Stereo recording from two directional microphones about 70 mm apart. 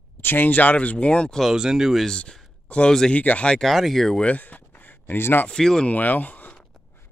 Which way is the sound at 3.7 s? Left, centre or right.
Centre.